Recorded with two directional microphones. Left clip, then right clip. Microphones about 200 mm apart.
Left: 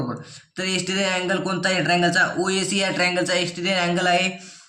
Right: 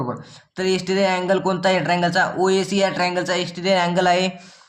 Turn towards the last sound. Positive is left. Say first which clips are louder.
# right 1 dB
turn(degrees=-40)  # may be behind; listen again after turning